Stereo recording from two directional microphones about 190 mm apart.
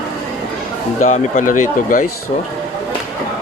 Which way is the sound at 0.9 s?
40° left (ahead or behind).